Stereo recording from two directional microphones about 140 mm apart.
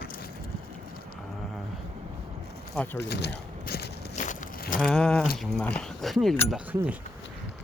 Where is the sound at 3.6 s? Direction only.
75° left (ahead or behind).